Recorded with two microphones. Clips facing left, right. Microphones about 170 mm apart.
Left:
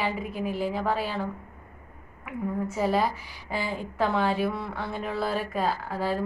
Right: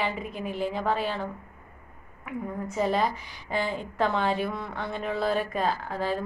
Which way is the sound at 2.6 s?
5° left (ahead or behind).